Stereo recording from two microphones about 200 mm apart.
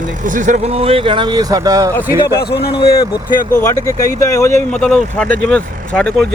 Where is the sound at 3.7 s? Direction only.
15° left (ahead or behind).